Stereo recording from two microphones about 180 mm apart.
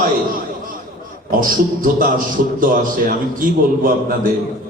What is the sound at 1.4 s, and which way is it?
A man's voice, 50° right (ahead or behind).